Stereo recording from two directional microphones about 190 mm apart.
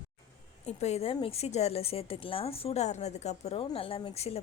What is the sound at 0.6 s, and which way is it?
A woman's voice, 35° left (ahead or behind).